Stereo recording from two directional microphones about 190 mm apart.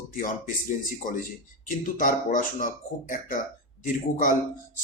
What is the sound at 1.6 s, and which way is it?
Speech, 45° left (ahead or behind).